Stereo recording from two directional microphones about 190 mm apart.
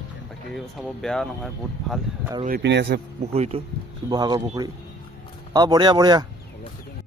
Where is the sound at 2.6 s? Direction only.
65° right (ahead or behind).